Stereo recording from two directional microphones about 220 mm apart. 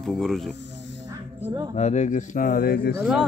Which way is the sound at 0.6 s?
55° left (ahead or behind).